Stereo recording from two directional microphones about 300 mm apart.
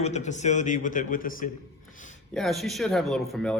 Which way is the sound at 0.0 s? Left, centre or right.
Left.